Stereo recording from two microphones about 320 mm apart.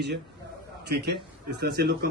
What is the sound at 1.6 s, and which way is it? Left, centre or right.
Speech, right.